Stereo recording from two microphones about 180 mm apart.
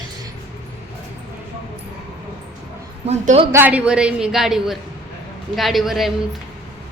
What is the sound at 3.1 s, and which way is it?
Speech, 35° right (ahead or behind).